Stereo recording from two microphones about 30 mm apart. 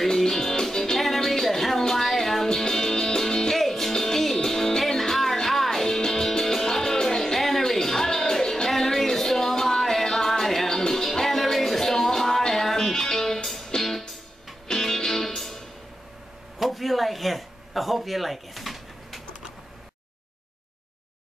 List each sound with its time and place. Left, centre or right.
0.3 s music: centre
3.5 s music: centre
7.3 s music: centre
16.5 s a sound: centre